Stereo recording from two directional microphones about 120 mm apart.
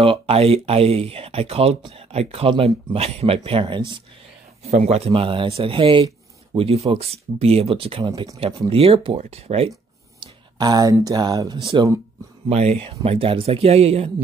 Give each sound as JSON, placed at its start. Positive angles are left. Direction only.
{"t": 0.0, "sound": "speech", "side_deg": -55}
{"t": 4.6, "sound": "speech", "side_deg": -65}
{"t": 8.1, "sound": "speech", "side_deg": -30}
{"t": 8.6, "sound": "speech", "side_deg": -55}
{"t": 10.2, "sound": "speech", "side_deg": -35}
{"t": 12.4, "sound": "speech", "side_deg": -60}